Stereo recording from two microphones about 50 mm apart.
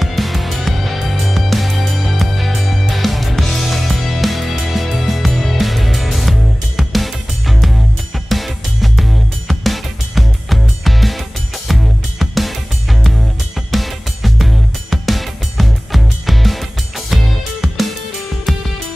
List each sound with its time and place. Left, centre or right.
0.0 s music: centre
13.6 s music: centre